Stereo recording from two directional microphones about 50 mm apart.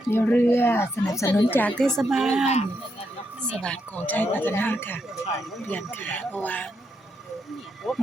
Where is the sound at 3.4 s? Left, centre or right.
Centre.